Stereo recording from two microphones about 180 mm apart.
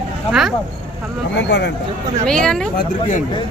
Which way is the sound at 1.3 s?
75° left (ahead or behind).